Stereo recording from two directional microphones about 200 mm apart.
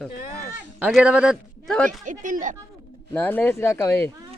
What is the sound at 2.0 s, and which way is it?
Speech, 40° right (ahead or behind).